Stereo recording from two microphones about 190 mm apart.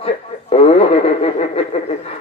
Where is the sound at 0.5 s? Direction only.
30° left (ahead or behind).